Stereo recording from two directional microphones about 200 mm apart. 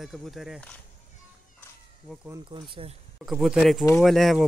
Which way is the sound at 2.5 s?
25° right (ahead or behind).